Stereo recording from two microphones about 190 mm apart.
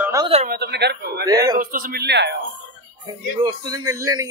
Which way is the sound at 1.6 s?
45° right (ahead or behind).